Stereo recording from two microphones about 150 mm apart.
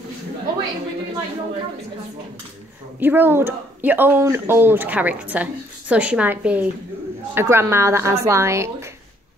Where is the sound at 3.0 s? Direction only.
15° right (ahead or behind).